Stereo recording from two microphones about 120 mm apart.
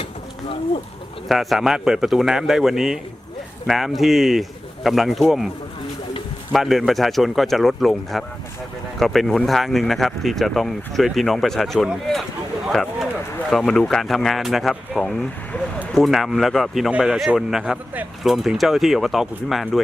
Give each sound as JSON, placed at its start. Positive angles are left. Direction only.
{"t": 0.0, "sound": "a sound", "side_deg": 50}
{"t": 1.3, "sound": "speech", "side_deg": 0}
{"t": 6.5, "sound": "speech", "side_deg": 0}